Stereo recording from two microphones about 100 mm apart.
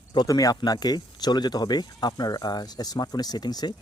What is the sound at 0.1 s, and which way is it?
Speech, 40° left (ahead or behind).